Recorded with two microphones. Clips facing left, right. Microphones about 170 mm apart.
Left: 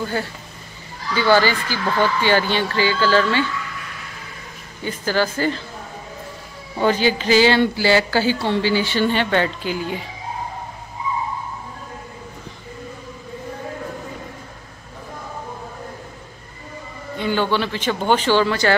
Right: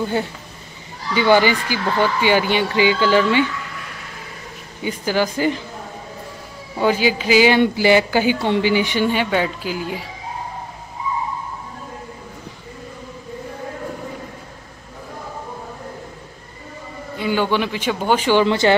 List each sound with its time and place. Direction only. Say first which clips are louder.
0.0 s speech: right 3 dB; 20° right (ahead or behind)
4.8 s speech: right 1 dB; 15° right (ahead or behind)
6.8 s speech: even; 10° right (ahead or behind)
17.2 s speech: right 1 dB; 10° right (ahead or behind)